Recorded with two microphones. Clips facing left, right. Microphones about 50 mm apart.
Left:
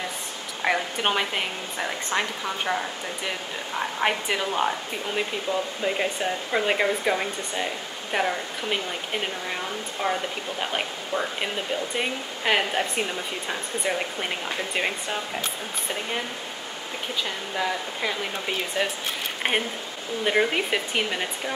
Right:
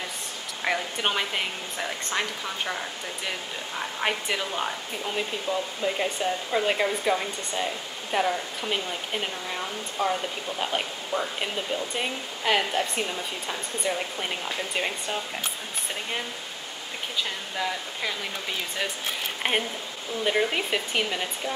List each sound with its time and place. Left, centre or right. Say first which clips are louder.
0.6 s speech: left 3 dB; centre
3.8 s speech: left 3 dB; centre
10.6 s speech: even; centre
11.1 s speech: left 1 dB; left
11.4 s speech: left 1 dB; centre
17.2 s speech: left 2 dB; centre
19.4 s speech: left 1 dB; centre